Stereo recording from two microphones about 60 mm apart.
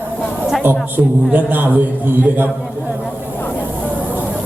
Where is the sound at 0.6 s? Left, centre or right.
Right.